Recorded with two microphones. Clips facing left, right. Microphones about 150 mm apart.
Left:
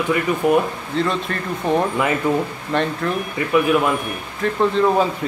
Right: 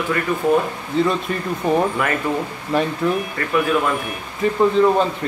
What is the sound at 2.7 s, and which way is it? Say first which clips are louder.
Speech: right 1 dB; 5° right (ahead or behind).